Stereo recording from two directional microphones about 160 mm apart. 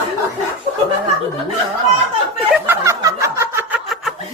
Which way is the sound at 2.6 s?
20° right (ahead or behind).